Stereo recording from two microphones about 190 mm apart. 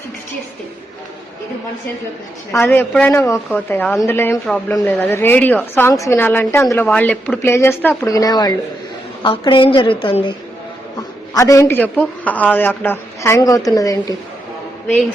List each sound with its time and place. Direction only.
2.7 s a woman's voice: 10° left (ahead or behind); by 10.3 s 25° left (ahead or behind)
11.3 s a woman's voice: 15° left (ahead or behind)